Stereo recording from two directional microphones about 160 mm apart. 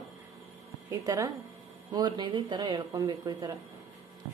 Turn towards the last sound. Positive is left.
turn(degrees=-25)  # may be behind; listen again after turning